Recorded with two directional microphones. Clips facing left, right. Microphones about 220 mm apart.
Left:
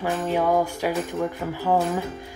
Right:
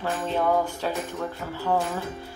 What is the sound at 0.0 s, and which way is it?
Speech, 10° left (ahead or behind).